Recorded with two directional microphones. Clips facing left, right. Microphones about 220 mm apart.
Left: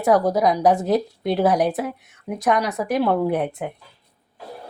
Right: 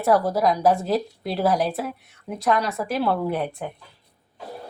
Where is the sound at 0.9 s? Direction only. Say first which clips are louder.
Left 4 dB; centre (ahead or behind).